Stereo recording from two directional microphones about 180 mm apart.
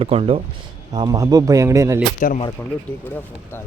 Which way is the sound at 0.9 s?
20° right (ahead or behind).